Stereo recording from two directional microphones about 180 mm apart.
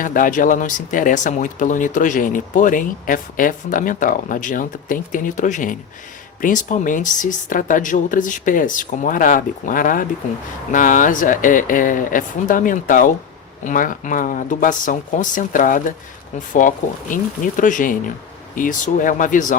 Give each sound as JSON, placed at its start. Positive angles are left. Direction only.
{"t": 0.0, "sound": "speech", "side_deg": 50}